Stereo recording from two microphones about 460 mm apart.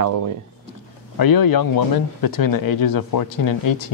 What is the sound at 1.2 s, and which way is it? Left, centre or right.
Speech, left.